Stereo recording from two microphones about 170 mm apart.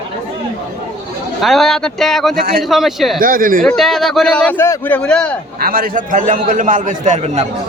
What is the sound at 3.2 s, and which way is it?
Speech, 55° right (ahead or behind).